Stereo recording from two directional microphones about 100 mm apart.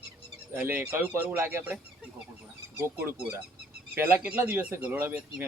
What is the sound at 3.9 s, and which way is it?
Speech, 20° right (ahead or behind).